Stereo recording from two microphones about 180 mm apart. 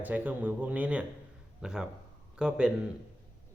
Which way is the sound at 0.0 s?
10° right (ahead or behind).